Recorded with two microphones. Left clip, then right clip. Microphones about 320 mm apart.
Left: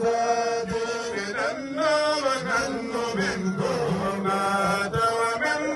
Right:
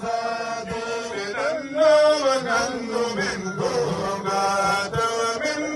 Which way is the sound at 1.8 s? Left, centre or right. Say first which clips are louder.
Right 7 dB; centre.